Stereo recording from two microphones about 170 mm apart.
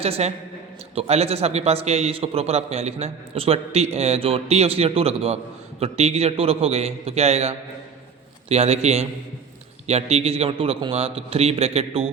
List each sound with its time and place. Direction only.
0.0 s a man's voice: 35° right (ahead or behind)